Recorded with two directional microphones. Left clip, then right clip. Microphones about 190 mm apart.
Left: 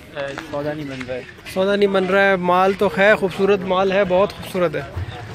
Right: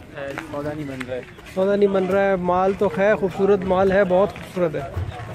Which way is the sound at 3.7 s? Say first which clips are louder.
Even; 25° right (ahead or behind).